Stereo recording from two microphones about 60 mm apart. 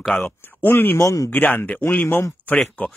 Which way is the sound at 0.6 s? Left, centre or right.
Left.